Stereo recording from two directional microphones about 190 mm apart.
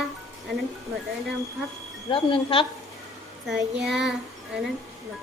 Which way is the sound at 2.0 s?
30° left (ahead or behind).